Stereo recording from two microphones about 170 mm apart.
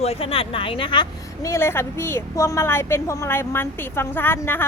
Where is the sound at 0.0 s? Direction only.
35° left (ahead or behind).